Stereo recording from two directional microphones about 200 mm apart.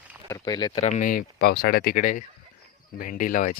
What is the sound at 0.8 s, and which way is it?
Speech, 40° left (ahead or behind).